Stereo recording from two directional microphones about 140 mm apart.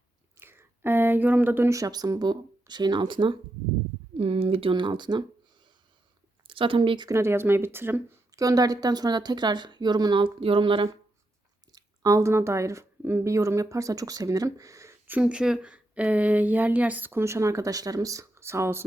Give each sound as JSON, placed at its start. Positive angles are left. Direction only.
{"t": 0.3, "sound": "speech", "side_deg": -15}
{"t": 6.5, "sound": "speech", "side_deg": -40}
{"t": 7.1, "sound": "speech", "side_deg": -20}
{"t": 11.7, "sound": "speech", "side_deg": -25}